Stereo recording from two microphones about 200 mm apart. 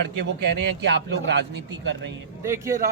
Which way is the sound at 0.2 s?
55° right (ahead or behind).